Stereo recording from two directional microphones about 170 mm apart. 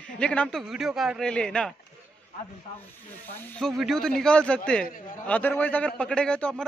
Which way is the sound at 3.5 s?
Centre (ahead or behind).